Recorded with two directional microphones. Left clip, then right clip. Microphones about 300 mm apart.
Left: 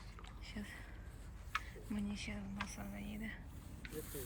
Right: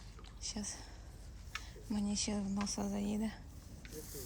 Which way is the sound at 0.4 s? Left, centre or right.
Centre.